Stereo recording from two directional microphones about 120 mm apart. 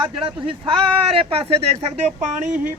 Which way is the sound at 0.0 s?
40° right (ahead or behind).